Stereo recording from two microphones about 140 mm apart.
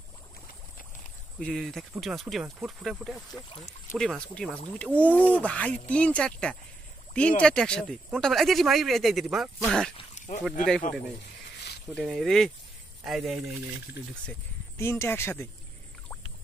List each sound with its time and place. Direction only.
1.4 s speech: centre (ahead or behind)
10.1 s a sound: 60° left (ahead or behind)
11.9 s speech: centre (ahead or behind)
14.8 s speech: 20° left (ahead or behind)